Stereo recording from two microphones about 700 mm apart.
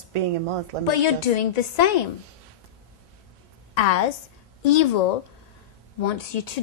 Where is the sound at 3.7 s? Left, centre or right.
Left.